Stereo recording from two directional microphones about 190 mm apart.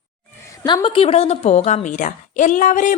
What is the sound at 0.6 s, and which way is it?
A woman's voice, 25° left (ahead or behind).